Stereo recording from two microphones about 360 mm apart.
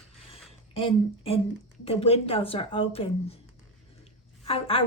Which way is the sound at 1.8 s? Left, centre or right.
Centre.